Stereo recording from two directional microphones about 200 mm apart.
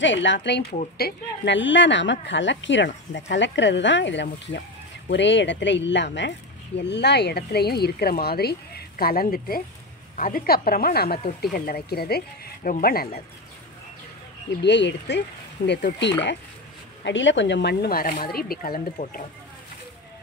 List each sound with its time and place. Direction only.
0.0 s speech: 65° left (ahead or behind); by 13.2 s 50° left (ahead or behind)
14.6 s speech: 60° left (ahead or behind); by 19.2 s 45° left (ahead or behind)